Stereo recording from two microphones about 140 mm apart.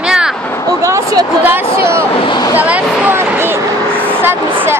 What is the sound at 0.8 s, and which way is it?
A woman's voice, 25° right (ahead or behind).